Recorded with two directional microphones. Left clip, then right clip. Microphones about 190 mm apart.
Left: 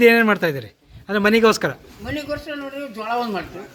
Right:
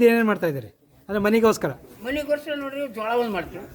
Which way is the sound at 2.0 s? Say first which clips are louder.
Right 2 dB; 15° right (ahead or behind).